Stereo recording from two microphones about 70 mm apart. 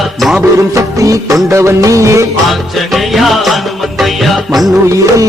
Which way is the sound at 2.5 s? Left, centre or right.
Centre.